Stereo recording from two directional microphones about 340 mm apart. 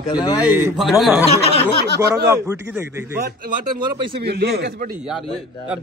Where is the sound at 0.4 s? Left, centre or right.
Centre.